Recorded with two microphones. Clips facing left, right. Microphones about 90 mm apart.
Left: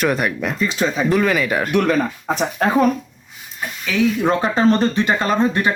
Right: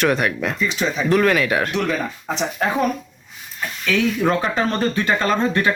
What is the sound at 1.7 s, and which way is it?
Speech, 50° left (ahead or behind).